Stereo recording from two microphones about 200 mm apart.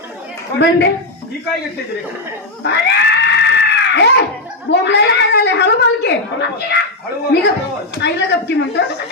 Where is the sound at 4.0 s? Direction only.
60° left (ahead or behind).